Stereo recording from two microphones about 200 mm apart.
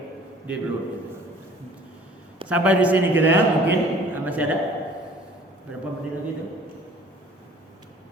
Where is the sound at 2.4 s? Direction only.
5° right (ahead or behind).